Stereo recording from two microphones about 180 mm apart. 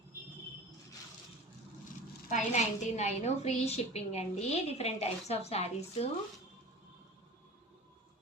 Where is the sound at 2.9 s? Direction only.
40° left (ahead or behind).